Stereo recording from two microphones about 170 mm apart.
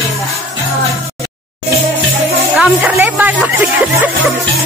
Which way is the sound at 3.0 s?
10° right (ahead or behind).